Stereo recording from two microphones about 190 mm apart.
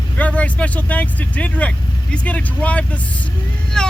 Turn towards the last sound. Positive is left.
turn(degrees=5)  # may be behind; listen again after turning